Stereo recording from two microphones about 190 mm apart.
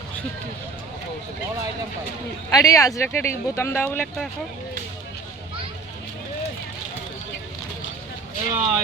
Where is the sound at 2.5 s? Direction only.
15° left (ahead or behind).